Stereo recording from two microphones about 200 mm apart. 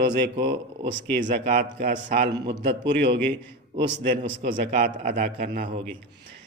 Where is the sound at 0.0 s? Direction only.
60° right (ahead or behind).